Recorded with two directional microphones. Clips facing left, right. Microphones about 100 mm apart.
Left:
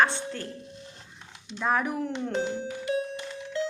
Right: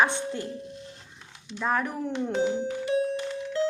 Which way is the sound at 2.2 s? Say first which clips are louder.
Right 8 dB; 10° right (ahead or behind).